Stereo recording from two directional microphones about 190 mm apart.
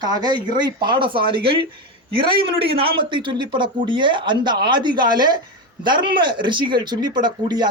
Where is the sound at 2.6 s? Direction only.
30° right (ahead or behind).